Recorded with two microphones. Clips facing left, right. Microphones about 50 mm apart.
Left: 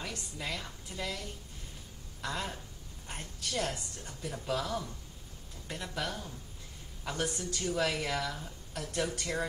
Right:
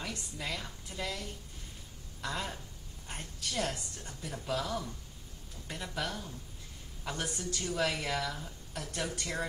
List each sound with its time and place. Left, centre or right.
0.0 s a sound: centre
0.8 s a woman's voice: centre
2.2 s a woman's voice: centre
6.0 s a woman's voice: centre
7.1 s a woman's voice: centre